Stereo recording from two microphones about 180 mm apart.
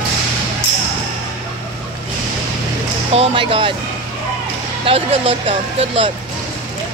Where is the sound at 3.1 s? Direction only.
30° right (ahead or behind).